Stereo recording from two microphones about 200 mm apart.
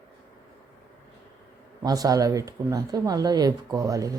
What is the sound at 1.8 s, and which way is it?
Speech, 20° right (ahead or behind).